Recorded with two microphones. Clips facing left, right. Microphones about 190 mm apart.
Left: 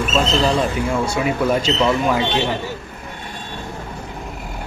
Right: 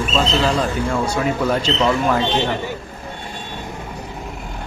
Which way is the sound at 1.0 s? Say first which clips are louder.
Even; 10° left (ahead or behind).